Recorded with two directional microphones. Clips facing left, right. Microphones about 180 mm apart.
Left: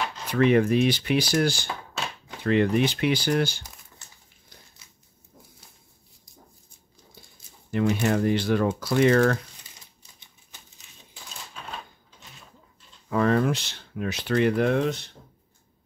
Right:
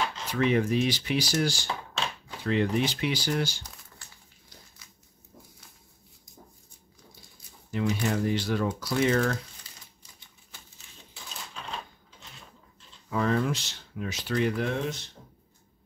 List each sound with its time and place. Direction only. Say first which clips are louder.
0.3 s speech: left 6 dB; 60° left (ahead or behind)
4.8 s a sound: right 1 dB; 25° left (ahead or behind)
7.7 s speech: left 5 dB; 60° left (ahead or behind)
13.1 s speech: left 4 dB; 60° left (ahead or behind)